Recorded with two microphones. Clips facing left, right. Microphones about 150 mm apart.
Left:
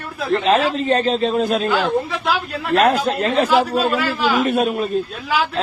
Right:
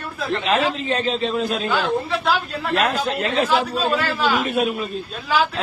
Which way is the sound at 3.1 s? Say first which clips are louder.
Left 3 dB; 45° left (ahead or behind).